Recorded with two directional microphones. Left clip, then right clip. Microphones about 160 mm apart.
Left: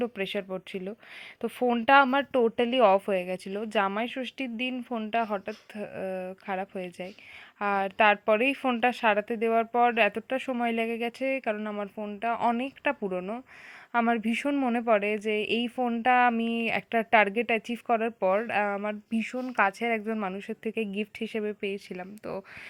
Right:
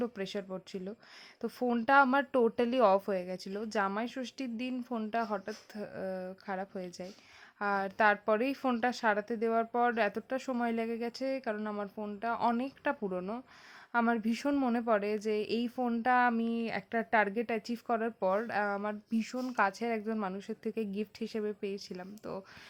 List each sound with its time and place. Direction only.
0.0 s speech: 15° left (ahead or behind)